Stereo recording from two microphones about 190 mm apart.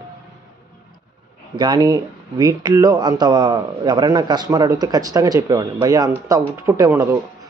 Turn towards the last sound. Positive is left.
turn(degrees=-15)  # may be behind; listen again after turning